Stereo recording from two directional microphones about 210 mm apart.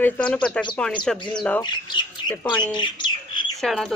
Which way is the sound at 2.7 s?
20° left (ahead or behind).